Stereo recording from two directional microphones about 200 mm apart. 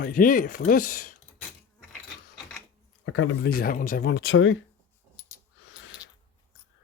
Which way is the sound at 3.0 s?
80° left.